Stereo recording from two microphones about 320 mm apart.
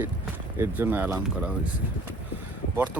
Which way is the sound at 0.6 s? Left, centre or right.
Centre.